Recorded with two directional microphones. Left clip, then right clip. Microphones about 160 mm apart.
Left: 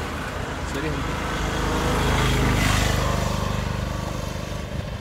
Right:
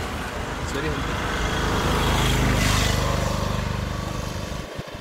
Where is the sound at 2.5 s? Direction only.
45° right (ahead or behind).